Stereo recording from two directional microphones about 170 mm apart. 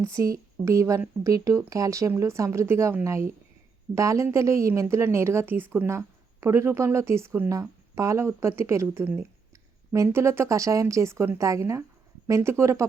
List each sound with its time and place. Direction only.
0.0 s a woman's voice: 20° right (ahead or behind)